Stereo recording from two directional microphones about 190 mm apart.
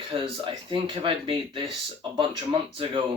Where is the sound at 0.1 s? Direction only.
25° right (ahead or behind).